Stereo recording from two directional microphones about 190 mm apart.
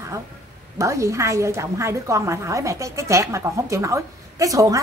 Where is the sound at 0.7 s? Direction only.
15° right (ahead or behind).